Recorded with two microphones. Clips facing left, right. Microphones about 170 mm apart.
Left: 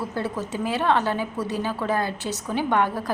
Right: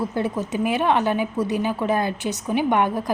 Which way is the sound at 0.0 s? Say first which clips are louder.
Right 4 dB; 15° right (ahead or behind).